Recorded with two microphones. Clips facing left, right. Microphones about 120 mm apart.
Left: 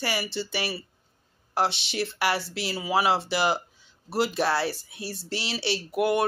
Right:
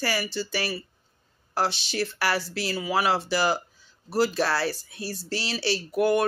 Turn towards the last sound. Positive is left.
turn(degrees=20)  # may be behind; listen again after turning